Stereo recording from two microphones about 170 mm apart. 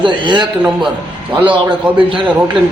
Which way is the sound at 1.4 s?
30° right (ahead or behind).